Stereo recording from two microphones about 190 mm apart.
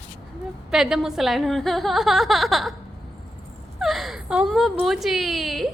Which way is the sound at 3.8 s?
Centre (ahead or behind).